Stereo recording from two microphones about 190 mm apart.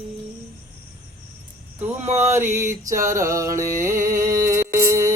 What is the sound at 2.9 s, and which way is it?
Music, 15° right (ahead or behind).